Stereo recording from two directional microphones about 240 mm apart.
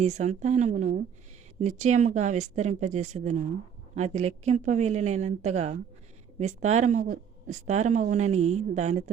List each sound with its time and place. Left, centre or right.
0.0 s speech: right